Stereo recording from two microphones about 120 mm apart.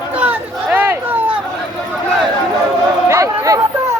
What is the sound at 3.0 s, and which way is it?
Chatter, 25° right (ahead or behind).